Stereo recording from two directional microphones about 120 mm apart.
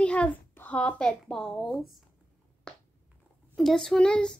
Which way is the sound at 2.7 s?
5° left (ahead or behind).